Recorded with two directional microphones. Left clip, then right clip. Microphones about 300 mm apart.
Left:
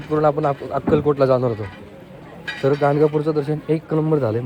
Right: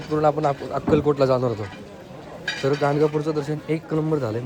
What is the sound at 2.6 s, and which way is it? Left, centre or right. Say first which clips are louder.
Speech: left 4 dB; centre.